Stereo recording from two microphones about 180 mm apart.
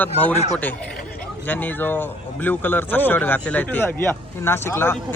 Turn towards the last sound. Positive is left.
turn(degrees=10)  # may be behind; listen again after turning